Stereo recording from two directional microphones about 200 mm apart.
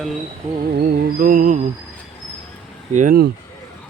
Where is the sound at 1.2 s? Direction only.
45° right (ahead or behind).